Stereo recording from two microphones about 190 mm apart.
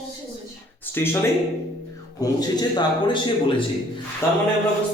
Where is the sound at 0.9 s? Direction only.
10° left (ahead or behind).